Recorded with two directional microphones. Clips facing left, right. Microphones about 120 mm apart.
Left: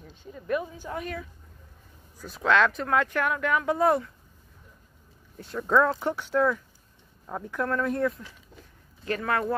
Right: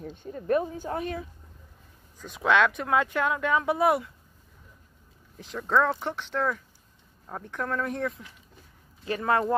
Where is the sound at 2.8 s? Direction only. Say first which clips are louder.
Even; 15° right (ahead or behind).